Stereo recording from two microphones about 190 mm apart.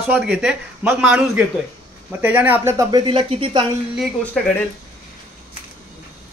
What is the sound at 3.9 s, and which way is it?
Speech, 5° left (ahead or behind).